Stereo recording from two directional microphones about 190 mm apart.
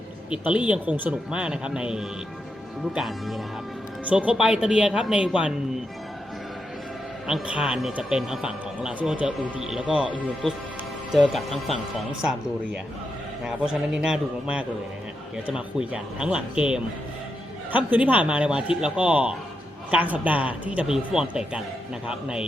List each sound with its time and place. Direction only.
0.3 s speech: 5° right (ahead or behind)
7.3 s speech: 5° right (ahead or behind)